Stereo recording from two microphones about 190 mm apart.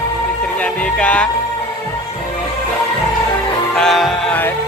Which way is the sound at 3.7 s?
Centre (ahead or behind).